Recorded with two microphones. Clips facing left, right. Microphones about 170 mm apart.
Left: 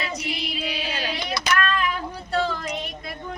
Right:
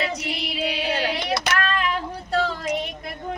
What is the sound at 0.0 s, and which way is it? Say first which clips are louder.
Child singing: right 2 dB; 65° right (ahead or behind).